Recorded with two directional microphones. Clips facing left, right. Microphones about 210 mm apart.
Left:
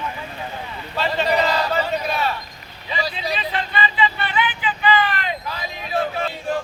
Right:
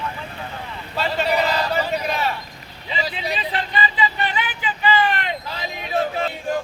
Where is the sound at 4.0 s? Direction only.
40° right (ahead or behind).